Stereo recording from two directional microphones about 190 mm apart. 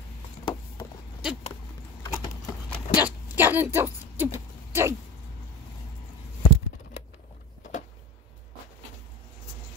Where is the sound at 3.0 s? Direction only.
10° right (ahead or behind).